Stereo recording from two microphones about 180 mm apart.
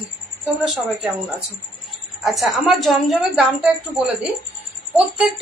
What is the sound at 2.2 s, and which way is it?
A woman's voice, centre (ahead or behind).